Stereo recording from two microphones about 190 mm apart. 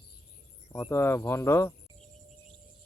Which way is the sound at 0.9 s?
15° left (ahead or behind).